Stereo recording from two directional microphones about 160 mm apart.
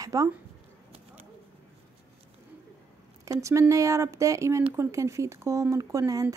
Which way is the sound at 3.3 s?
20° right (ahead or behind).